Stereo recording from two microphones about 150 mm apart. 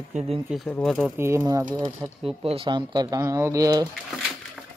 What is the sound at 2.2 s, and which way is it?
Speech, 40° right (ahead or behind).